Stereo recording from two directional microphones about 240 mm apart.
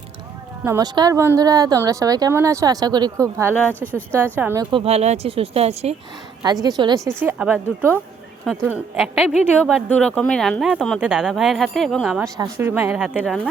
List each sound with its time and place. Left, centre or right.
0.6 s speech: centre
3.7 s speech: centre
4.1 s speech: centre
4.7 s speech: right; by 13.1 s centre
13.1 s speech: centre